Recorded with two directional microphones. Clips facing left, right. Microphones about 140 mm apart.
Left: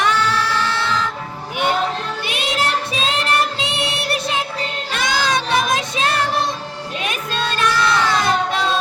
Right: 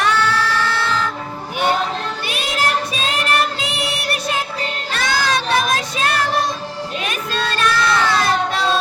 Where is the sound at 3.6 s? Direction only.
25° left (ahead or behind).